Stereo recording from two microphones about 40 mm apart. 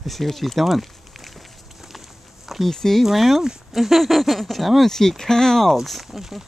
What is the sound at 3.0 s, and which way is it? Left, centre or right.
Speech, centre.